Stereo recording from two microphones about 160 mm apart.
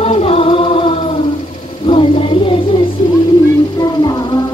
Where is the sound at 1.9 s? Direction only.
30° left (ahead or behind).